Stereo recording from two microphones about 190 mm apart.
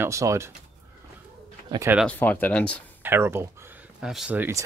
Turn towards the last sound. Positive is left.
turn(degrees=-10)  # may be behind; listen again after turning